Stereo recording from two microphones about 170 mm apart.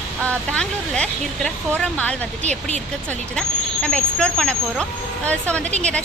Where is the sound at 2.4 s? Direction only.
40° right (ahead or behind).